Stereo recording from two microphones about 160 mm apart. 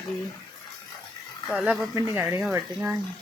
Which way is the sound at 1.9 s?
15° right (ahead or behind).